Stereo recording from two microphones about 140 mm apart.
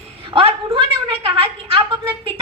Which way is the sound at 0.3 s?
40° right (ahead or behind).